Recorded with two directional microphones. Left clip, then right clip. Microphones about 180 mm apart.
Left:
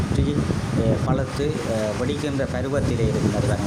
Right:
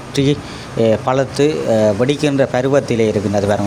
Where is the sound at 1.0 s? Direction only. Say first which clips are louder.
Right 10 dB; 50° right (ahead or behind).